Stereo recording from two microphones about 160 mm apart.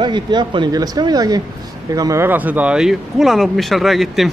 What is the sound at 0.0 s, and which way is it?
Speech, 30° right (ahead or behind).